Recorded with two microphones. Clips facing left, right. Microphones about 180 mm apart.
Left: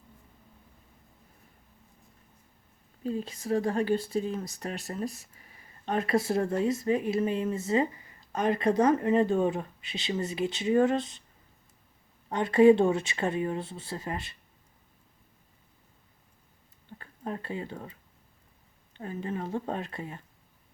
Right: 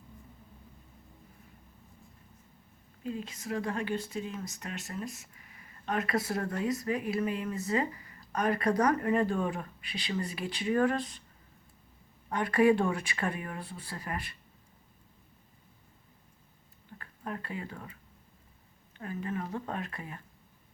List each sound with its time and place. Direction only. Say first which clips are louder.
3.0 s speech: left 5 dB; 35° left (ahead or behind)
12.3 s speech: left 5 dB; 25° left (ahead or behind)
17.0 s speech: left 3 dB; 30° left (ahead or behind)
18.9 s speech: left 2 dB; 30° left (ahead or behind)